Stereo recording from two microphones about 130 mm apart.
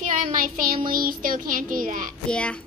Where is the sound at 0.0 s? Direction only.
90° right.